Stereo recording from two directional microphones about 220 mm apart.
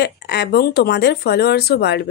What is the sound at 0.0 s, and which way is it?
Speech, 50° left (ahead or behind).